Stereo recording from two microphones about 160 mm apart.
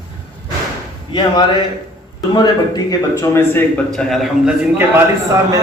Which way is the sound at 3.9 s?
Centre (ahead or behind).